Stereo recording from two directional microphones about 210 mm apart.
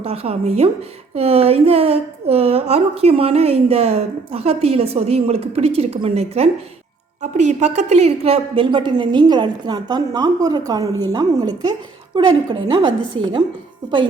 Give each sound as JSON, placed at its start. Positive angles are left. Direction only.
{"t": 0.0, "sound": "a woman's voice", "side_deg": -30}